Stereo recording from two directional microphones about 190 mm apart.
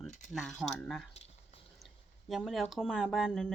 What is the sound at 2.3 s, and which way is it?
Speech, centre (ahead or behind).